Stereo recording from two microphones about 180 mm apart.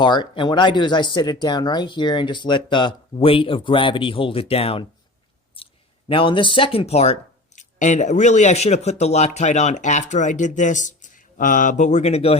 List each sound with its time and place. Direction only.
0.0 s speech: 25° left (ahead or behind)
5.6 s a sound: 30° left (ahead or behind)
6.1 s speech: 30° left (ahead or behind)